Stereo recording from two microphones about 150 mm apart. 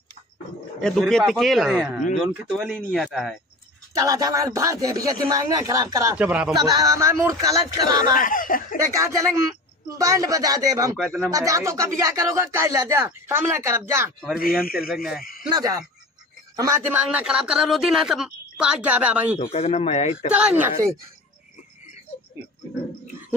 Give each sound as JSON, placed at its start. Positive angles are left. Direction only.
{"t": 0.7, "sound": "speech", "side_deg": 5}
{"t": 3.9, "sound": "speech", "side_deg": -20}
{"t": 6.1, "sound": "a man's voice", "side_deg": -5}
{"t": 6.5, "sound": "speech", "side_deg": -25}
{"t": 8.1, "sound": "speech", "side_deg": 65}
{"t": 8.8, "sound": "speech", "side_deg": -20}
{"t": 14.6, "sound": "speech", "side_deg": 75}
{"t": 15.5, "sound": "a man's voice", "side_deg": -25}
{"t": 19.5, "sound": "speech", "side_deg": 45}
{"t": 20.2, "sound": "a man's voice", "side_deg": -10}